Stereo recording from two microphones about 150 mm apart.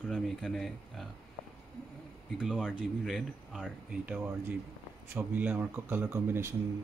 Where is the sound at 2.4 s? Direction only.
5° left (ahead or behind).